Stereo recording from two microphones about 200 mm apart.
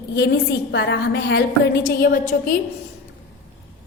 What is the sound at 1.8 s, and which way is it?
Speech, 45° left (ahead or behind).